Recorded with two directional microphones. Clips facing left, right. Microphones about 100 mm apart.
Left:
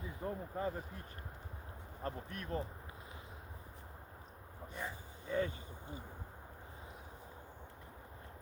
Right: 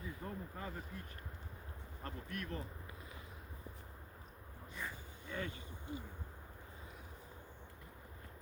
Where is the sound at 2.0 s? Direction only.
30° left (ahead or behind).